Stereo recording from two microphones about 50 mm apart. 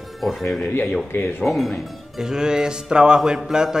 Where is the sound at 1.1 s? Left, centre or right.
Left.